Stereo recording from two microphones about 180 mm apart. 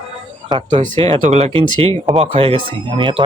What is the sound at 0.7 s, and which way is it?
Speech, 45° right (ahead or behind).